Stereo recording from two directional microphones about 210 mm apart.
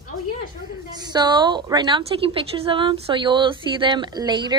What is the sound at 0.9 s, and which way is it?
A woman's voice, 20° right (ahead or behind).